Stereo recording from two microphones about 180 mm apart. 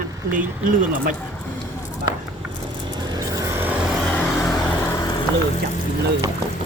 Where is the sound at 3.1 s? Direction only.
15° right (ahead or behind).